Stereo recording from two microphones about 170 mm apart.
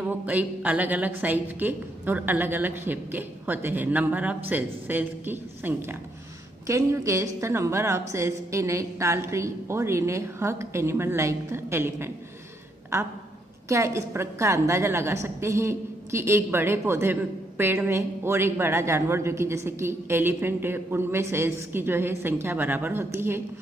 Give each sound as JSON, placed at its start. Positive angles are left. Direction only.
{"t": 0.3, "sound": "a woman's voice", "side_deg": -10}